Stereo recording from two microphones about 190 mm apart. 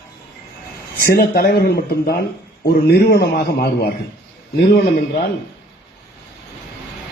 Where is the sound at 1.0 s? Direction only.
50° left (ahead or behind).